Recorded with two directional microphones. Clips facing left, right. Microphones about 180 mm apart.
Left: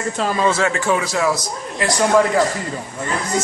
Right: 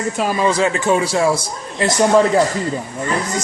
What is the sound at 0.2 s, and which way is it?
A man's voice, 10° right (ahead or behind).